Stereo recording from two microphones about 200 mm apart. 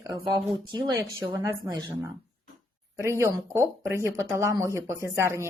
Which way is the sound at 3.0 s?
15° right (ahead or behind).